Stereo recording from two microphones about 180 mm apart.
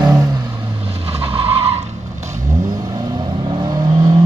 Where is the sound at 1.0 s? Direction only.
30° right (ahead or behind).